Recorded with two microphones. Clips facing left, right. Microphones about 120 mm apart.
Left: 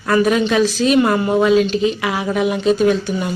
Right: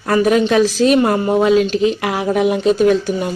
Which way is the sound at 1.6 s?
50° right (ahead or behind).